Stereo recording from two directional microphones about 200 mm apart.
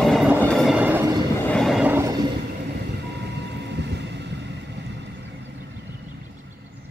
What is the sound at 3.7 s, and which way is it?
Vehicle, 60° right (ahead or behind).